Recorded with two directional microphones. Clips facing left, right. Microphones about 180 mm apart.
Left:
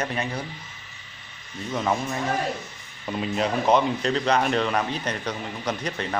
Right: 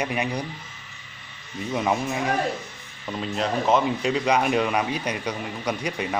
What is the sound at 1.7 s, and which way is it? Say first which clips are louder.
Speech: right 1 dB; 10° right (ahead or behind).